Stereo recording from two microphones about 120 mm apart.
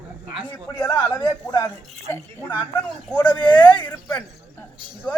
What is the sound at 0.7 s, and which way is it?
Speech, 15° left (ahead or behind).